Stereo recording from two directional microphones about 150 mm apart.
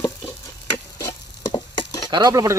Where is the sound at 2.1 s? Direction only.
25° right (ahead or behind).